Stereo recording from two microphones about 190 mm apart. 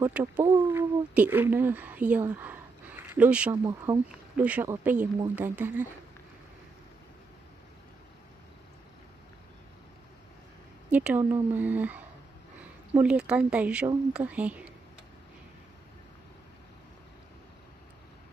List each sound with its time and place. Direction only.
0.0 s speech: 15° right (ahead or behind)
3.6 s a woman's voice: 20° right (ahead or behind)
4.4 s a woman's voice: 5° right (ahead or behind)
10.9 s a woman's voice: 5° right (ahead or behind)